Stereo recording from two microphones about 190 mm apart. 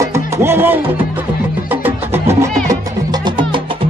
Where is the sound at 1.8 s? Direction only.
10° right (ahead or behind).